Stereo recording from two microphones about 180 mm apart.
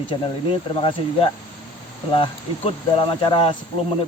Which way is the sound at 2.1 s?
30° left (ahead or behind).